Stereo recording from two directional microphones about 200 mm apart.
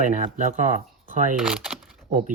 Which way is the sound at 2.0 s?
40° right (ahead or behind).